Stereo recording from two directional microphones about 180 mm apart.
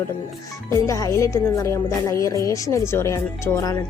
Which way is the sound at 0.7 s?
20° left (ahead or behind).